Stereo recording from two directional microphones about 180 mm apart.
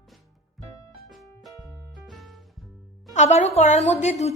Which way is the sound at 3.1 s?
40° left (ahead or behind).